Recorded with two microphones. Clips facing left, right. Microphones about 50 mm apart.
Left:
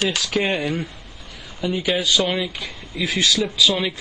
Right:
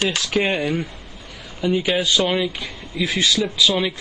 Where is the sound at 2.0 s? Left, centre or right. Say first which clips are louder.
Right 1 dB; centre.